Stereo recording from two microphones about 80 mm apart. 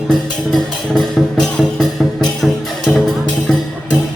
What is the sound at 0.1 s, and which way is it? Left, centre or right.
Music, centre.